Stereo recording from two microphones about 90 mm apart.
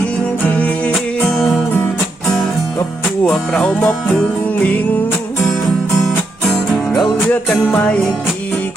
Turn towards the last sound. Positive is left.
turn(degrees=15)  # may be behind; listen again after turning